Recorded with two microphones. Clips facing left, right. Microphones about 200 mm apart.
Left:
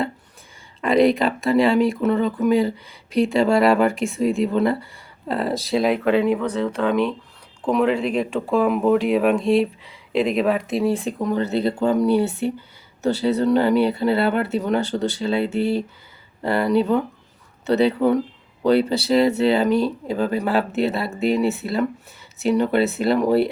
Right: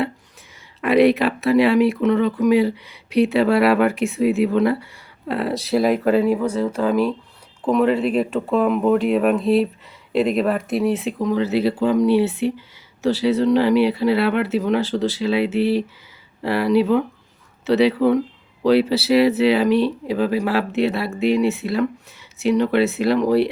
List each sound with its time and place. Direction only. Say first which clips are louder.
0.8 s speech: right 2 dB; 5° right (ahead or behind)